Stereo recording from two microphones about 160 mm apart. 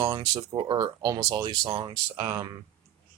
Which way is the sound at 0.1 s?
25° right (ahead or behind).